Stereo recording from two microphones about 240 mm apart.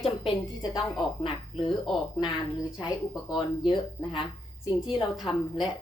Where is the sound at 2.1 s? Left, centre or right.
Centre.